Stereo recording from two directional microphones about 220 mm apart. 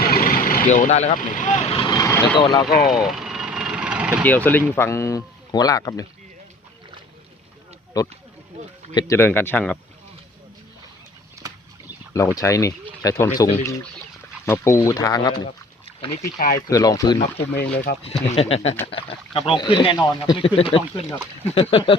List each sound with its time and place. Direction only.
0.0 s speech: 40° left (ahead or behind)
1.9 s vehicle: 15° left (ahead or behind)
2.6 s speech: 45° left (ahead or behind)
2.9 s vehicle: centre (ahead or behind)
4.2 s speech: 5° left (ahead or behind)
7.9 s speech: 15° left (ahead or behind)
11.4 s a sound: 15° right (ahead or behind)
12.1 s speech: 15° left (ahead or behind)
16.6 s speech: 15° left (ahead or behind)
17.5 s speech: 50° left (ahead or behind)
18.0 s speech: 30° left (ahead or behind)